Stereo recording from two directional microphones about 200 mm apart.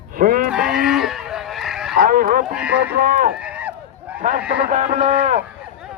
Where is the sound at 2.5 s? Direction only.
5° right (ahead or behind).